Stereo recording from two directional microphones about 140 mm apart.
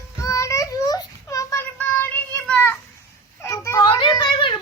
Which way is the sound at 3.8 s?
35° left (ahead or behind).